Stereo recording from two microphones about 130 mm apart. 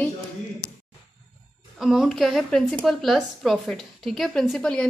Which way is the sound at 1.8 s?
Centre (ahead or behind).